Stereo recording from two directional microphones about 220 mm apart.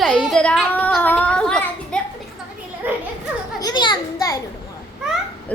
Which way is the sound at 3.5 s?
20° left (ahead or behind).